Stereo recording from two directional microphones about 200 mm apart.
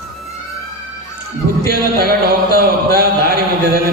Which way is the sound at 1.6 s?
50° right (ahead or behind).